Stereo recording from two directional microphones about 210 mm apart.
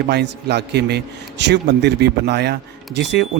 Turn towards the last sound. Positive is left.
turn(degrees=-55)  # may be behind; listen again after turning